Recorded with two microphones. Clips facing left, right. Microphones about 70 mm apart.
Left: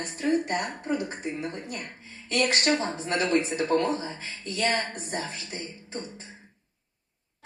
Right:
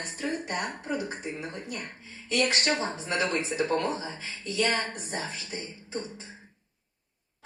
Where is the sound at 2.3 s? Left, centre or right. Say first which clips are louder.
Left 2 dB; left.